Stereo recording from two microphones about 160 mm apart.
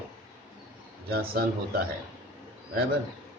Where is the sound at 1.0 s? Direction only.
70° right (ahead or behind).